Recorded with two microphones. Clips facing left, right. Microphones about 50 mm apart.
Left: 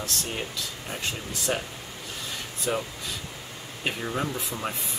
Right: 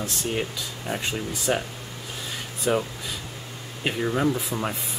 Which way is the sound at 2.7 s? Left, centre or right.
Right.